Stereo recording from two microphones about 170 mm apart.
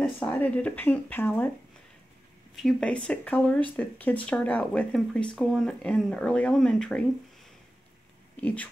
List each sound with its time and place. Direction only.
0.2 s speech: 10° left (ahead or behind)
2.5 s speech: 5° left (ahead or behind)
8.4 s speech: 10° left (ahead or behind)